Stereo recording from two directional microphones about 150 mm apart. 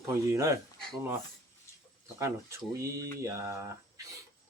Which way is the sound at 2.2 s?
20° right (ahead or behind).